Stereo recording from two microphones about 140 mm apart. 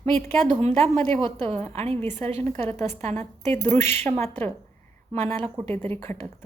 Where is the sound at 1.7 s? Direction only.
45° right (ahead or behind).